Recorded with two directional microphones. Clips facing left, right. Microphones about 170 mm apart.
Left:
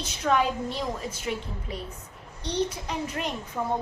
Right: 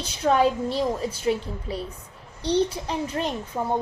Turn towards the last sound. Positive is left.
turn(degrees=-30)  # may be behind; listen again after turning